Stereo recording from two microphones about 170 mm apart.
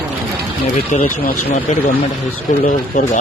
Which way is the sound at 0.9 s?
45° left (ahead or behind).